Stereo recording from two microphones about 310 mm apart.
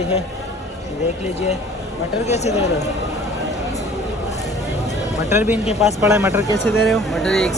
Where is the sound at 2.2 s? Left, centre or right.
Left.